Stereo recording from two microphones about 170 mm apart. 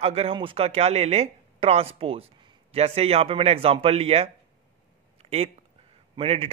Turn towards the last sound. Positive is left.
turn(degrees=-35)  # may be behind; listen again after turning